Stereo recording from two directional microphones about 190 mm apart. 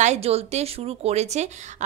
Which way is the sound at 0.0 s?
35° right (ahead or behind).